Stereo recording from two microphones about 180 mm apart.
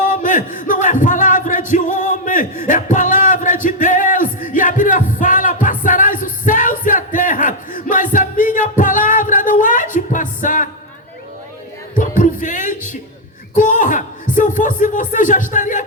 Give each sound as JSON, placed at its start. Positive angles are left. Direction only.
{"t": 0.1, "sound": "battle cry", "side_deg": 45}
{"t": 1.7, "sound": "music", "side_deg": 45}
{"t": 11.9, "sound": "music", "side_deg": 45}
{"t": 13.5, "sound": "a sound", "side_deg": 45}